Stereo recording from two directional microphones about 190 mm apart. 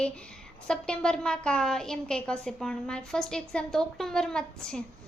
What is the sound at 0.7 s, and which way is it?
A woman's voice, 5° left (ahead or behind).